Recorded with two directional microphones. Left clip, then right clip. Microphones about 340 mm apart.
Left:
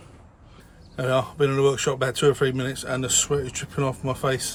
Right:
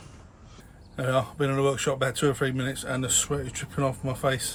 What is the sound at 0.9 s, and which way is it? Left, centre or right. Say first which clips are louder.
Speech: left 3 dB; centre.